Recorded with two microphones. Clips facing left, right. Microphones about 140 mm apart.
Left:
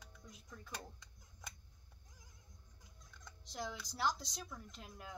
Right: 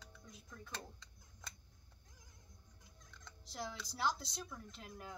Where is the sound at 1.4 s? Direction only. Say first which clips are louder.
Left 1 dB; 15° left (ahead or behind).